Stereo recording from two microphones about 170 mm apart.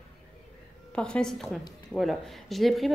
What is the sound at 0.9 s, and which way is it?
A woman's voice, 5° left (ahead or behind).